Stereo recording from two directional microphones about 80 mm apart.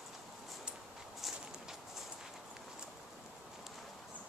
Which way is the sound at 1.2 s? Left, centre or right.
Centre.